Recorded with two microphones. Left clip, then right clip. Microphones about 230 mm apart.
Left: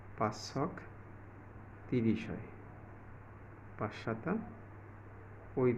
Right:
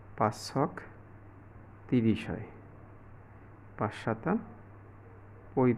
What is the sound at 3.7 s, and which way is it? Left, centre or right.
Speech, right.